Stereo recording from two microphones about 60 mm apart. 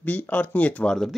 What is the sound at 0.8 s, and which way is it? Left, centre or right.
Speech, centre.